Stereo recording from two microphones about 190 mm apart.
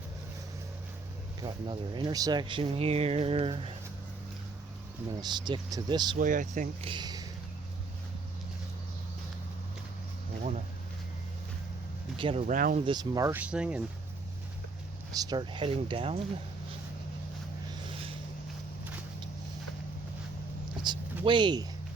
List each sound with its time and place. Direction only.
1.4 s speech: 25° right (ahead or behind)
5.1 s speech: 25° right (ahead or behind)
6.1 s speech: 45° right (ahead or behind)
6.8 s speech: 25° right (ahead or behind)
12.1 s a sound: 30° right (ahead or behind)
12.5 s speech: 45° right (ahead or behind)
12.8 s speech: 20° right (ahead or behind); by 13.8 s 5° right (ahead or behind)
15.1 s speech: 20° right (ahead or behind)
20.9 s a sound: 25° right (ahead or behind)
21.2 s speech: 25° right (ahead or behind)